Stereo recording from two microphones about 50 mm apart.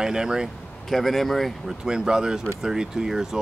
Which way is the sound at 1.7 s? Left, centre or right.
Centre.